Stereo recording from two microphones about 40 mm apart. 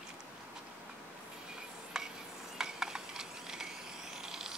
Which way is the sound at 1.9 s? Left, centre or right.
Centre.